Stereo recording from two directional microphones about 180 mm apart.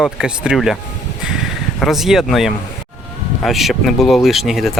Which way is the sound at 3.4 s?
Centre (ahead or behind).